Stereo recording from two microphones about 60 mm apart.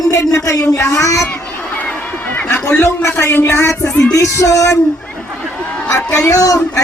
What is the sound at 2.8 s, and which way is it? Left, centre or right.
Speech, left.